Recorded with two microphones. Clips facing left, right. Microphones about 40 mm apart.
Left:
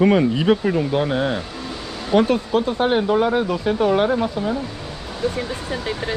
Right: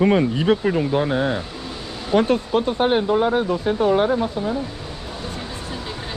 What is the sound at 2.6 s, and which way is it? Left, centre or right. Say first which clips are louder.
Speech: even; right.